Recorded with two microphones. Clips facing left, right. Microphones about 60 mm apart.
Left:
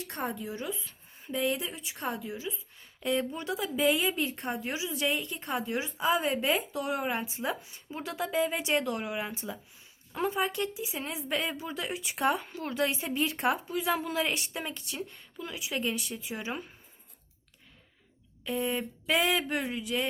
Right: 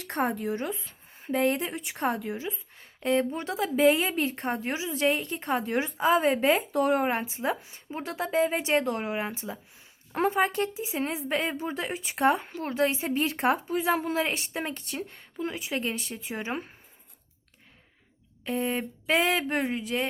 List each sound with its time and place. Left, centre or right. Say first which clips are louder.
0.0 s a woman's voice: right 7 dB; right
2.4 s a woman's voice: right 3 dB; right
6.1 s a woman's voice: right 5 dB; right
10.2 s a woman's voice: right 5 dB; right
18.4 s a woman's voice: right 2 dB; right